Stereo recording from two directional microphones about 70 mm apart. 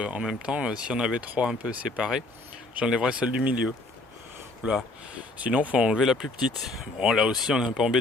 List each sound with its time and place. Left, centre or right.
0.0 s speech: centre
4.6 s speech: centre
6.0 s speech: centre